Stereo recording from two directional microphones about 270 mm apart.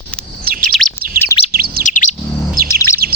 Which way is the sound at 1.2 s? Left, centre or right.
Centre.